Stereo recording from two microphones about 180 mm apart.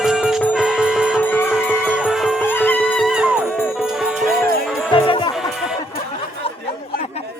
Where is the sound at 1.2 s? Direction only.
10° left (ahead or behind).